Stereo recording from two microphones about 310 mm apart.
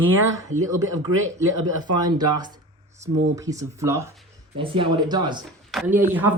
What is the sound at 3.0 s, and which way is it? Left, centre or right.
Speech, centre.